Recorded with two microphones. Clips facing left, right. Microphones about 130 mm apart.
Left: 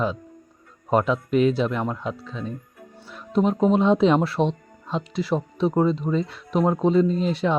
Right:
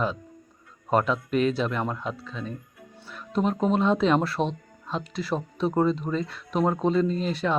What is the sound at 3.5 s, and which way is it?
Speech, 15° left (ahead or behind).